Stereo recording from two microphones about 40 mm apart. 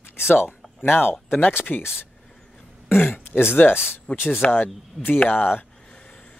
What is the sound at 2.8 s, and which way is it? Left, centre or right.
Speech, left.